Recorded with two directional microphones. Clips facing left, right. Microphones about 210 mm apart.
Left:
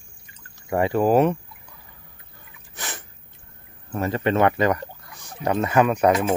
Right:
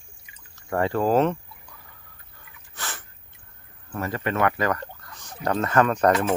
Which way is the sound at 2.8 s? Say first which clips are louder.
Left 2 dB; 15° left (ahead or behind).